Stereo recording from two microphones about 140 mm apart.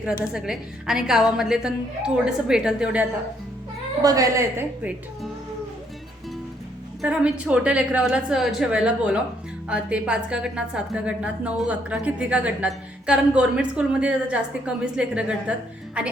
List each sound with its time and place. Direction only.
0.0 s a woman's voice: 5° right (ahead or behind)
4.0 s a woman's voice: 25° right (ahead or behind)
7.0 s a woman's voice: 5° right (ahead or behind)